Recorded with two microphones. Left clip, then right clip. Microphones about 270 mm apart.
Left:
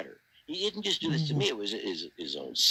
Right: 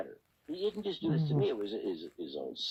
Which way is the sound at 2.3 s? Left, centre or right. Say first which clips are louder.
Left 2 dB; left.